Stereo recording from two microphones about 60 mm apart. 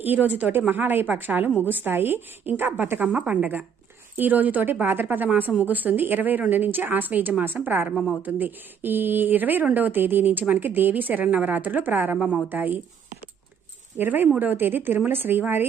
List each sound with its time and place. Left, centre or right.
0.0 s a woman's voice: right
12.1 s a woman's voice: centre
12.5 s a woman's voice: right
14.0 s a woman's voice: right